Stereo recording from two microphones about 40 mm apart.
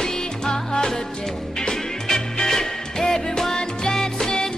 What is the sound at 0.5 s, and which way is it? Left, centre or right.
Music, centre.